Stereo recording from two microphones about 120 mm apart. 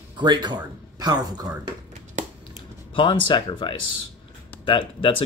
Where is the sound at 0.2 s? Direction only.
40° right (ahead or behind).